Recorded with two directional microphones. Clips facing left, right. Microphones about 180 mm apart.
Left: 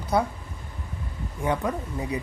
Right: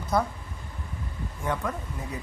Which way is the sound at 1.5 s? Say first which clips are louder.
Left 4 dB; 15° left (ahead or behind).